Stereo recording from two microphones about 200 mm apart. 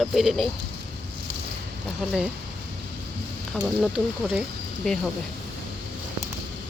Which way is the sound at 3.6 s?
5° right (ahead or behind).